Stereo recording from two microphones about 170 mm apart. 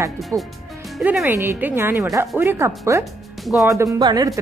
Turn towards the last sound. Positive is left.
turn(degrees=-25)  # may be behind; listen again after turning